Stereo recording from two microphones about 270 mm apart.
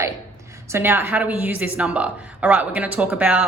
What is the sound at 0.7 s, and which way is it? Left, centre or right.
A woman's voice, centre.